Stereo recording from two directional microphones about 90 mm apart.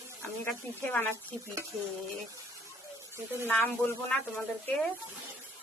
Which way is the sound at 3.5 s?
25° left (ahead or behind).